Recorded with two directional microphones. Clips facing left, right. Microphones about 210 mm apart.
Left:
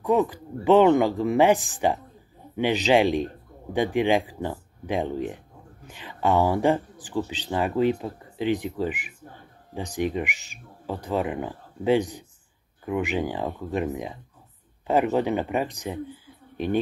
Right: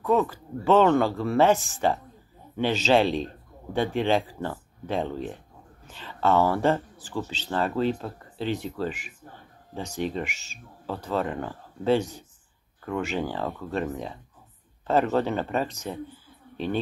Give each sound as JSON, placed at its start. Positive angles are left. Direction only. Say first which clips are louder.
{"t": 0.0, "sound": "speech", "louder": "left 1 dB", "side_deg": 15}